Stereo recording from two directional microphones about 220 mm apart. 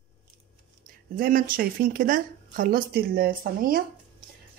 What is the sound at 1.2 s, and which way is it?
Speech, 40° right (ahead or behind).